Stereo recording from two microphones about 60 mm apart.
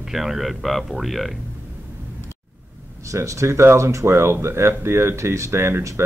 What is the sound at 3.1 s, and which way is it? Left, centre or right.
Speech, right.